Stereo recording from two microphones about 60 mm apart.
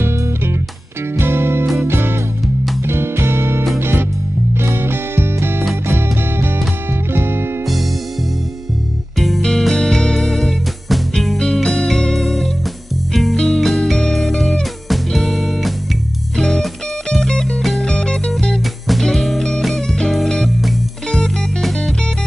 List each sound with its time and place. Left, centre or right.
0.0 s music: right
9.2 s music: centre